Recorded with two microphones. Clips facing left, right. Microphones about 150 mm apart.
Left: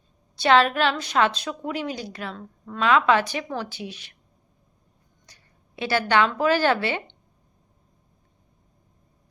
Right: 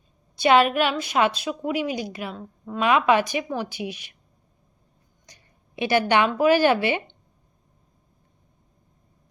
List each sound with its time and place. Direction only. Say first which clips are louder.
0.3 s a woman's voice: right 1 dB; 10° right (ahead or behind)
5.2 s speech: right 3 dB; 15° right (ahead or behind)